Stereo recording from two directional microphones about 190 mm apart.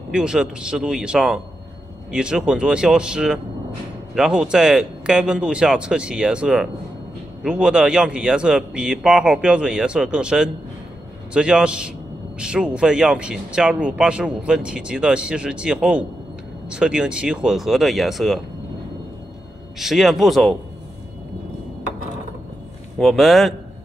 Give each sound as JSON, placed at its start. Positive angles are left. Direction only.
{"t": 0.1, "sound": "speech", "side_deg": -5}
{"t": 19.8, "sound": "speech", "side_deg": 0}
{"t": 22.9, "sound": "speech", "side_deg": 0}